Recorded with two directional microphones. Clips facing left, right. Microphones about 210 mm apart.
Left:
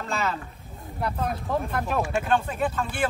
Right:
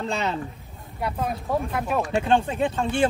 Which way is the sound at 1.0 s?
5° right (ahead or behind).